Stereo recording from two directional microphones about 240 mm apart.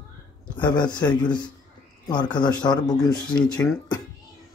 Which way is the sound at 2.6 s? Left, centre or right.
Centre.